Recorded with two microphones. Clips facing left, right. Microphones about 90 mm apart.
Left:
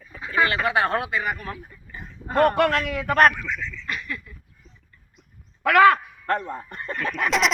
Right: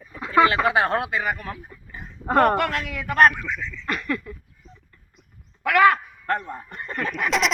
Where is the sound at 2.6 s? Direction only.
45° left (ahead or behind).